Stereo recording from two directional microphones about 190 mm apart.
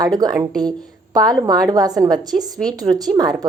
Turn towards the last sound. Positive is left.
turn(degrees=-20)  # may be behind; listen again after turning